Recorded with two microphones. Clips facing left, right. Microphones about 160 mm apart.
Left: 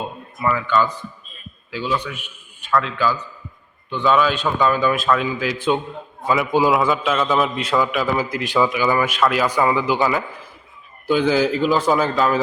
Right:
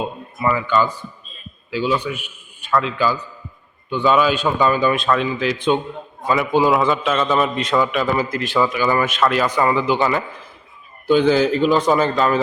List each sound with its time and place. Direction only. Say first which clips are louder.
0.4 s a man's voice: right 1 dB; 5° right (ahead or behind)